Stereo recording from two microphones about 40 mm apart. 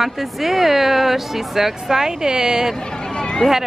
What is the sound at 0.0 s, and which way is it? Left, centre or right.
Speech, centre.